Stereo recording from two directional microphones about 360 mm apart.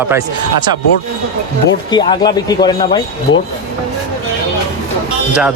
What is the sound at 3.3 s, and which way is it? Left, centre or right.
Speech, left.